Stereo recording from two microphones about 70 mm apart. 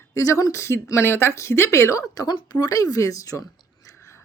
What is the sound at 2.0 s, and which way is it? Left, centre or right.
Speech, left.